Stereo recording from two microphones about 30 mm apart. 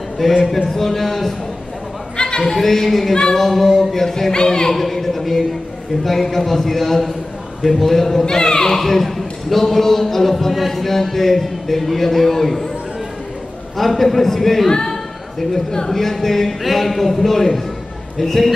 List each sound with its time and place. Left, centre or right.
0.2 s a man's voice: centre
2.1 s a sound: left
2.4 s a man's voice: centre
8.3 s speech: left
8.7 s a man's voice: centre
13.7 s a man's voice: centre
14.7 s a sound: left
15.9 s a man's voice: centre